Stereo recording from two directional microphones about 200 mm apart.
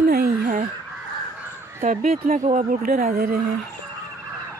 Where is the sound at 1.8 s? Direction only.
35° right (ahead or behind).